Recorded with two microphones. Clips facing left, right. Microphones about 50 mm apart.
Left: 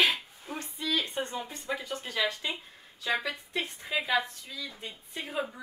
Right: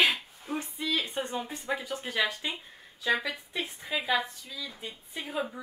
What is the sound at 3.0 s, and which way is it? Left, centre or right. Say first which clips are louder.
Speech: right 2 dB; centre.